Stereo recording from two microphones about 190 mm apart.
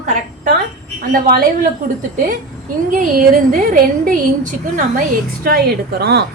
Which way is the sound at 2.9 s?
45° right (ahead or behind).